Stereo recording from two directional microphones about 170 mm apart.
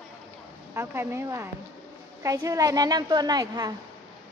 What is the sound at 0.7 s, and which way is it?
A woman's voice, 15° right (ahead or behind).